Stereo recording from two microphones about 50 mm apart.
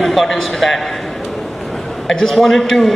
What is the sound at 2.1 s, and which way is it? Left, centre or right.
Speech, centre.